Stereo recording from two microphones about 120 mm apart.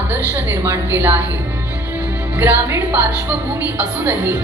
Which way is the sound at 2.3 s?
15° right (ahead or behind).